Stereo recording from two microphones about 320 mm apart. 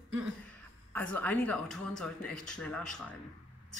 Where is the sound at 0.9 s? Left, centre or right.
Centre.